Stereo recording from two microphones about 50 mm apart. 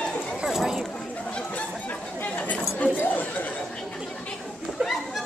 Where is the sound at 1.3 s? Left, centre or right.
Left.